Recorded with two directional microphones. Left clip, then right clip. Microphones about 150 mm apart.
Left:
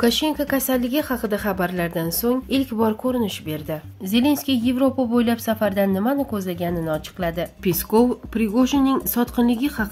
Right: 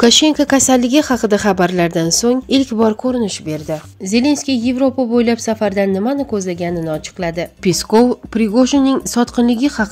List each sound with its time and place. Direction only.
0.0 s a woman's voice: 50° right (ahead or behind)